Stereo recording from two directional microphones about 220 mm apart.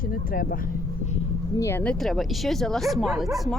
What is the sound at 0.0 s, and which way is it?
Speech, 40° left (ahead or behind).